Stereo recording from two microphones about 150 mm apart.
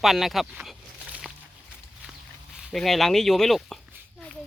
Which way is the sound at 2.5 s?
Centre (ahead or behind).